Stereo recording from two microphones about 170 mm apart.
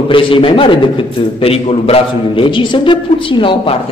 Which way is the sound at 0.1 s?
30° left (ahead or behind).